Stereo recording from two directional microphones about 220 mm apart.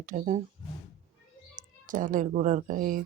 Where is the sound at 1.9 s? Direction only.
35° right (ahead or behind).